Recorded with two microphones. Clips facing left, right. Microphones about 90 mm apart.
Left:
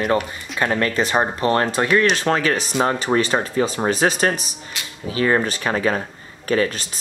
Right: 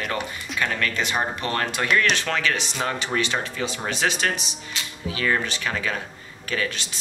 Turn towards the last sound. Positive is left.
turn(degrees=35)  # may be behind; listen again after turning